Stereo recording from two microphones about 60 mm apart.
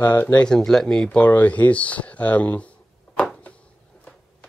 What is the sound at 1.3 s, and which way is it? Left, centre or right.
Speech, left.